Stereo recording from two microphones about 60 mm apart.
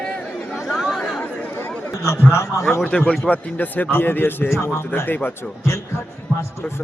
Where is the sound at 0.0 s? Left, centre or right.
Centre.